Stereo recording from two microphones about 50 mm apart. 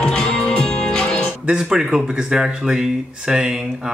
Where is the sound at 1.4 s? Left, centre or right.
Right.